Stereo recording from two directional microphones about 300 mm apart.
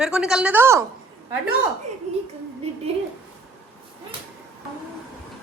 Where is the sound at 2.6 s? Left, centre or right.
Centre.